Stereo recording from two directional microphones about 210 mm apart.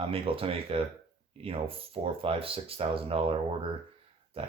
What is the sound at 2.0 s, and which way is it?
Speech, 25° right (ahead or behind).